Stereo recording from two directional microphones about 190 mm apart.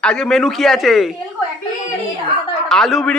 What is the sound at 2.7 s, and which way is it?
Speech, centre (ahead or behind).